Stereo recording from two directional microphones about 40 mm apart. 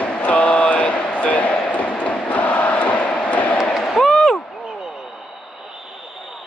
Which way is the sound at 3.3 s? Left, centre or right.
Left.